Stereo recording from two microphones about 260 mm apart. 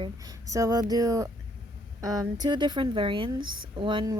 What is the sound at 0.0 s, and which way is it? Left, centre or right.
A woman's voice, centre.